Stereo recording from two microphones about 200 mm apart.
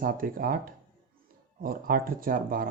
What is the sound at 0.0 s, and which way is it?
Speech, 45° right (ahead or behind).